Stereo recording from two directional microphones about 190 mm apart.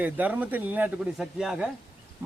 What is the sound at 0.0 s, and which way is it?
Speech, 10° right (ahead or behind).